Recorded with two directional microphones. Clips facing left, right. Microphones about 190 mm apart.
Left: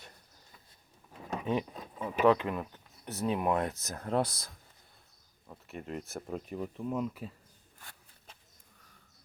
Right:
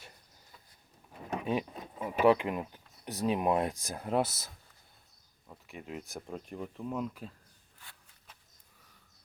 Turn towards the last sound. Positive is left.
turn(degrees=45)  # may be behind; listen again after turning